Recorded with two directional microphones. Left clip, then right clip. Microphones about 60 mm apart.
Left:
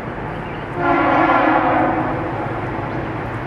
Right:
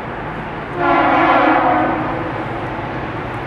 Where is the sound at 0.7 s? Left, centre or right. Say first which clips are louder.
Right 2 dB; centre.